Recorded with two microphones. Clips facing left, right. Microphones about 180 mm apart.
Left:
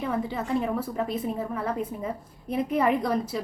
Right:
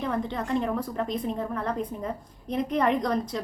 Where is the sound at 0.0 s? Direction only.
5° left (ahead or behind).